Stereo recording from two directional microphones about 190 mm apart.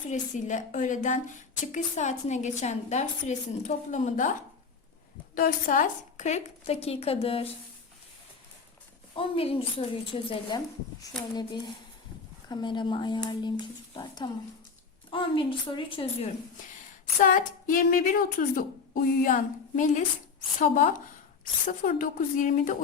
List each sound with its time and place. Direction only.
0.1 s a woman's voice: 40° left (ahead or behind)
5.3 s a woman's voice: 45° left (ahead or behind); by 7.4 s 30° left (ahead or behind)
9.1 s a woman's voice: 30° left (ahead or behind)
17.2 s a woman's voice: 45° left (ahead or behind)